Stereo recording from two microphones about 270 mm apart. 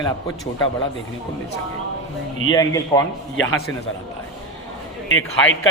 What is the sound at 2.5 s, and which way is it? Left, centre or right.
Speech, centre.